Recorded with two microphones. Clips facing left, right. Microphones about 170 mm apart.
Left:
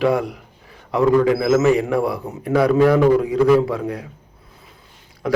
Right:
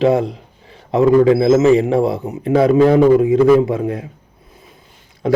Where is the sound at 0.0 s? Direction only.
25° right (ahead or behind).